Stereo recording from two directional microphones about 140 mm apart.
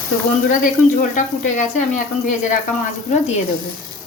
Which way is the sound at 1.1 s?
60° left (ahead or behind).